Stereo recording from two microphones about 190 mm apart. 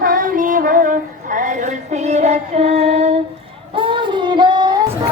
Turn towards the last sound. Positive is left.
turn(degrees=-20)  # may be behind; listen again after turning